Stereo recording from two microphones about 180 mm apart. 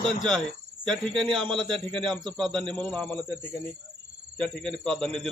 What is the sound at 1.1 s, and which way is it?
Speech, 25° right (ahead or behind).